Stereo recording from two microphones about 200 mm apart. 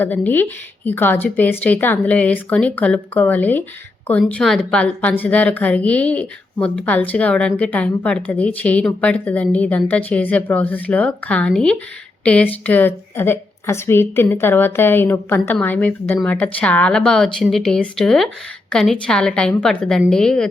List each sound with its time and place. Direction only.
0.0 s a woman's voice: 10° left (ahead or behind)